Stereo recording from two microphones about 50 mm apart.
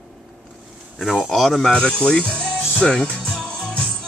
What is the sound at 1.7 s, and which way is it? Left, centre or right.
Speech, left.